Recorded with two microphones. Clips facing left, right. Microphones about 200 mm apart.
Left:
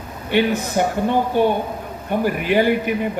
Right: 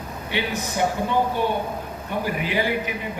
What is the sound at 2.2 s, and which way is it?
Speech, 55° left (ahead or behind).